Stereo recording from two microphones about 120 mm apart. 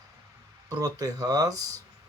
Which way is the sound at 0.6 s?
30° right (ahead or behind).